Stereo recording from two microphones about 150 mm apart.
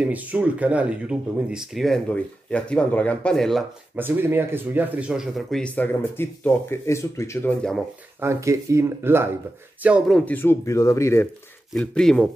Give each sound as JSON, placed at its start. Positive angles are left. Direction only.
{"t": 0.0, "sound": "speech", "side_deg": -10}
{"t": 3.9, "sound": "speech", "side_deg": -15}
{"t": 8.2, "sound": "speech", "side_deg": -20}
{"t": 10.1, "sound": "speech", "side_deg": 10}
{"t": 11.7, "sound": "speech", "side_deg": 5}